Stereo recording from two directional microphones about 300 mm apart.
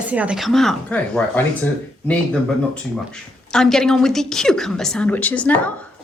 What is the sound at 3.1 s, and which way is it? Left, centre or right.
A woman's voice, centre.